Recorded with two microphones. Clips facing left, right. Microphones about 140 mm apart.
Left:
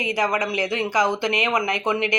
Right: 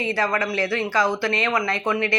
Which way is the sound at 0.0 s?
15° left (ahead or behind).